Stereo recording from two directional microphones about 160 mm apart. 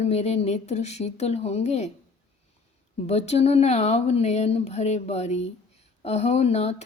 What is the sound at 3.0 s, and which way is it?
A woman's voice, 40° left (ahead or behind).